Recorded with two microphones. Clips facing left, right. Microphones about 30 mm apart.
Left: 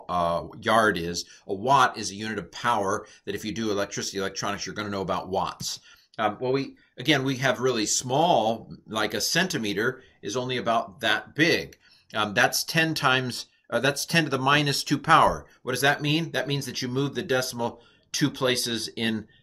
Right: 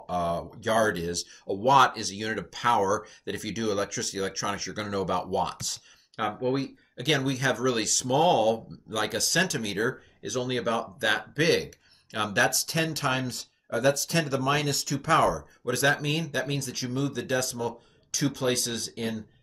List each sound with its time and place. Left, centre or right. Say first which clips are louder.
0.0 s speech: left 3 dB; left
1.5 s speech: even; centre; by 18.9 s left
18.9 s speech: left 4 dB; left